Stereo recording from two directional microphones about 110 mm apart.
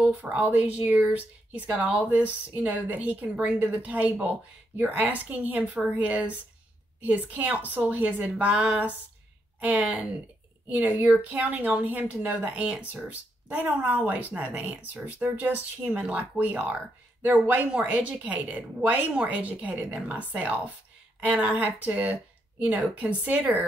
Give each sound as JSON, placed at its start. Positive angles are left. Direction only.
{"t": 0.0, "sound": "speech", "side_deg": -15}